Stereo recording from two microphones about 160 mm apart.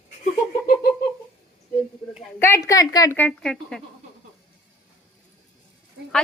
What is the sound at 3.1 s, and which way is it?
Speech, 10° left (ahead or behind).